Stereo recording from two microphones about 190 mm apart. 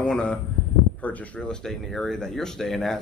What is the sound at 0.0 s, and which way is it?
Speech, 5° left (ahead or behind).